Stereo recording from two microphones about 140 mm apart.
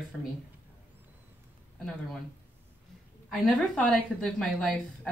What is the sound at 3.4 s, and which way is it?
Speech, 10° left (ahead or behind).